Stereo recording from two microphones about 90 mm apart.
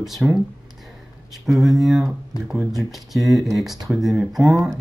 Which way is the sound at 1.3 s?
Centre (ahead or behind).